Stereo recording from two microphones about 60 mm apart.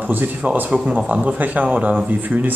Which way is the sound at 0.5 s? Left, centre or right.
Right.